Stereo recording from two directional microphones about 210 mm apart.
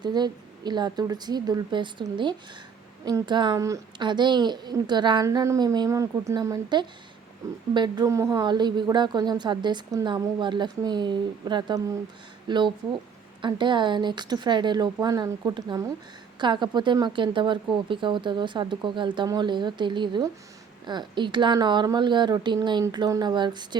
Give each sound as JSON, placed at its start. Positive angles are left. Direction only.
{"t": 0.0, "sound": "a woman's voice", "side_deg": -20}